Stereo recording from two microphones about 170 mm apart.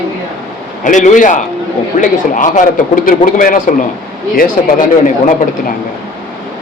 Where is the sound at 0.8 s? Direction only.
50° left (ahead or behind).